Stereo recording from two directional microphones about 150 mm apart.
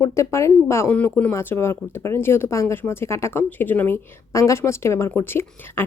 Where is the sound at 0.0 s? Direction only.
20° left (ahead or behind).